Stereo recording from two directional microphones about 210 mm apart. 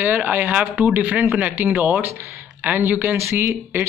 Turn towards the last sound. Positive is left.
turn(degrees=-10)  # may be behind; listen again after turning